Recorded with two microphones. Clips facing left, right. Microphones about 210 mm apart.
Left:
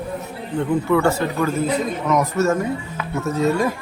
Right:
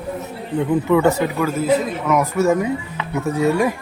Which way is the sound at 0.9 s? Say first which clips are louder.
Right 3 dB; 20° right (ahead or behind).